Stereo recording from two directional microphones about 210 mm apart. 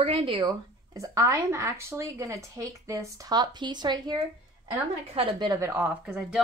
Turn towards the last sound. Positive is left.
turn(degrees=0)  # may be behind; listen again after turning